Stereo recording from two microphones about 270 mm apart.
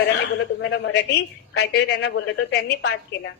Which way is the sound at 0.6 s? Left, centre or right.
Left.